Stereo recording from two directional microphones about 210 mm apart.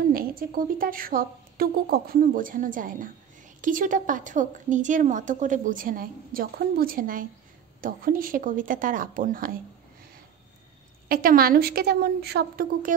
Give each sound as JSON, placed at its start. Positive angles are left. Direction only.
{"t": 0.1, "sound": "a woman's voice", "side_deg": -45}
{"t": 11.1, "sound": "a woman's voice", "side_deg": -45}